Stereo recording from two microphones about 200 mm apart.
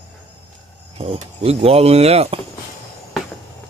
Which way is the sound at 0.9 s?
30° right (ahead or behind).